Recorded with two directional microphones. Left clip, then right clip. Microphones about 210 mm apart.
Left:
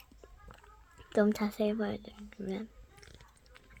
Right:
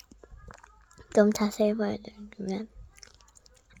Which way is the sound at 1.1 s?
40° right (ahead or behind).